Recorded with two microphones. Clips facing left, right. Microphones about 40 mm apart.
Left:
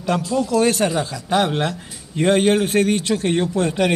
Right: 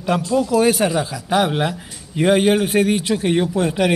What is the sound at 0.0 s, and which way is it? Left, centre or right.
A man's voice, centre.